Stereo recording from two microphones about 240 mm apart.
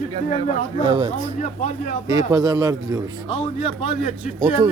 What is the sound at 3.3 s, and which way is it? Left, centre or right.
Speech, left.